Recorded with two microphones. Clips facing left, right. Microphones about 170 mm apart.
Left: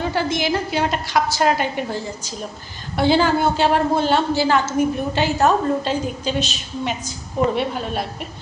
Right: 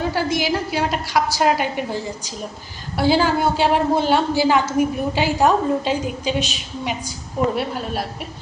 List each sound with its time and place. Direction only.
0.0 s a woman's voice: 5° right (ahead or behind)